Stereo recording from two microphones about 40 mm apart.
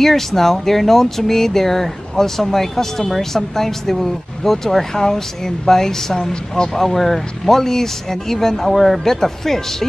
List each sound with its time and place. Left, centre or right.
0.0 s speech: centre